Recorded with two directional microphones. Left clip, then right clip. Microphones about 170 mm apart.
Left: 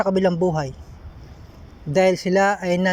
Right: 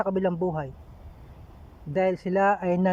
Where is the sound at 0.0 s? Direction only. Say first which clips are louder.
Left 7 dB; centre (ahead or behind).